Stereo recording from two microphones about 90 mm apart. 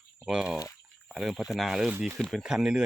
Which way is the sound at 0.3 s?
10° right (ahead or behind).